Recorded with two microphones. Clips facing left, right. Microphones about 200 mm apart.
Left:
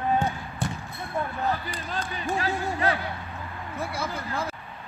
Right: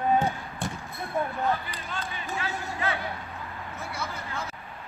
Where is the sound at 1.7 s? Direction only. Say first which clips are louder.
Left 3 dB; 40° left (ahead or behind).